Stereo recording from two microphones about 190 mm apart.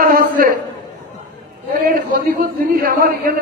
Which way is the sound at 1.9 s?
50° right (ahead or behind).